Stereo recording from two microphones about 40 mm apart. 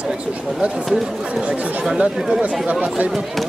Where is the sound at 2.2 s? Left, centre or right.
Centre.